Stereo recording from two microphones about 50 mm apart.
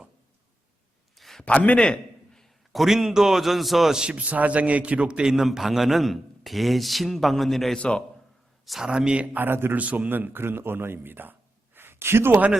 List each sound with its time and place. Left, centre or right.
1.1 s a sound: centre
1.5 s a sound: left
2.7 s a man's voice: centre
4.0 s a man's voice: right; by 7.8 s centre
7.8 s a man's voice: left
8.8 s a man's voice: centre
9.4 s a man's voice: right
9.7 s a man's voice: right
10.1 s speech: right